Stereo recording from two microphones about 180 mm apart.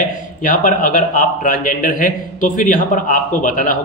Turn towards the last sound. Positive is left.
turn(degrees=45)  # may be behind; listen again after turning